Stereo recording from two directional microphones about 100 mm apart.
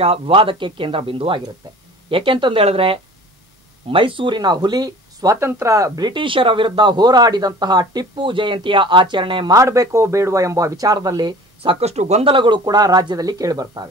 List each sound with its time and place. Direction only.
0.0 s speech: 70° right (ahead or behind)
3.9 s speech: 60° right (ahead or behind); by 5.4 s 40° right (ahead or behind)
5.4 s speech: 25° right (ahead or behind); by 9.5 s 55° right (ahead or behind)
9.5 s speech: 30° right (ahead or behind)
11.6 s speech: 75° right (ahead or behind)
12.4 s speech: 50° right (ahead or behind)